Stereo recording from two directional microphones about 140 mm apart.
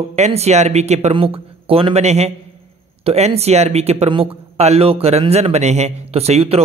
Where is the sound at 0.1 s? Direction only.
50° right (ahead or behind).